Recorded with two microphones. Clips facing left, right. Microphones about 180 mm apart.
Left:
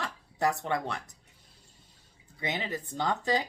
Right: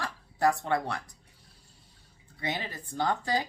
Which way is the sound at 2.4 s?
20° left (ahead or behind).